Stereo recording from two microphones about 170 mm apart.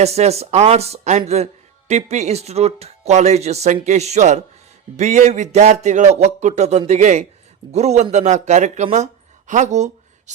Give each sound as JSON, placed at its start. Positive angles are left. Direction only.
{"t": 0.0, "sound": "speech", "side_deg": -40}